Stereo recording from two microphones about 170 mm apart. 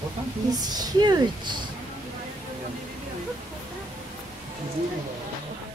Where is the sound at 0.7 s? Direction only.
25° right (ahead or behind).